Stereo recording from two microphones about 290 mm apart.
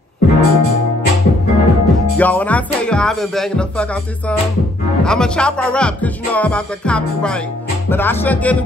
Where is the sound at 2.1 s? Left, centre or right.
Centre.